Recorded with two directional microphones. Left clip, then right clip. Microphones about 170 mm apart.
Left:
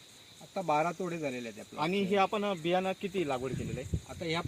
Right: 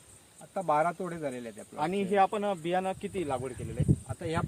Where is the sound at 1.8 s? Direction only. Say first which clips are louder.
Right 3 dB; 55° left (ahead or behind).